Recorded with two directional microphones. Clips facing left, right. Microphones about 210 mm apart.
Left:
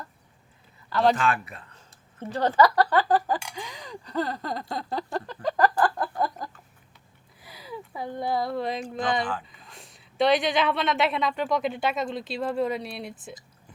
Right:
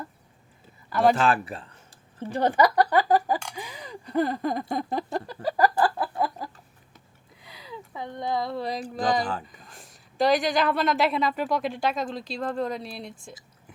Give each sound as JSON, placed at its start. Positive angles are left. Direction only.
{"t": 1.1, "sound": "speech", "side_deg": -30}
{"t": 2.3, "sound": "a sound", "side_deg": -15}
{"t": 7.4, "sound": "a sound", "side_deg": -20}
{"t": 7.9, "sound": "speech", "side_deg": 5}
{"t": 8.8, "sound": "speech", "side_deg": -35}
{"t": 9.7, "sound": "speech", "side_deg": 0}